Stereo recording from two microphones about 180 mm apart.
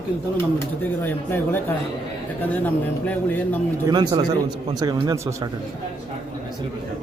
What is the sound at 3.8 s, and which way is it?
Speech, 25° right (ahead or behind).